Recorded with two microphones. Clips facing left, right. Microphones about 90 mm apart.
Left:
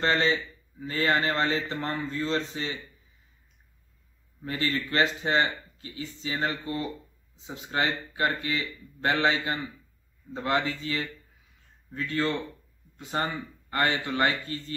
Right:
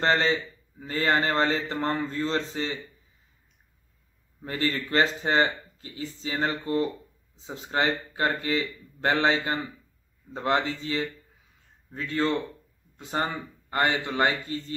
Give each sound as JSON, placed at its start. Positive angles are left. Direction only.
{"t": 0.0, "sound": "a man's voice", "side_deg": -35}
{"t": 4.4, "sound": "a man's voice", "side_deg": -35}